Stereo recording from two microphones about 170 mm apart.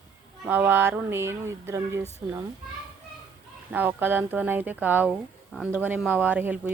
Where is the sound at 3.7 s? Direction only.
10° right (ahead or behind).